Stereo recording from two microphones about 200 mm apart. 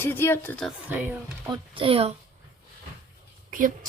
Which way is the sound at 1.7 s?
25° right (ahead or behind).